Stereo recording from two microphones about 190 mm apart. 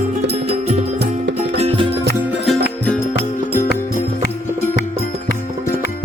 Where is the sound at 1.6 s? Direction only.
30° right (ahead or behind).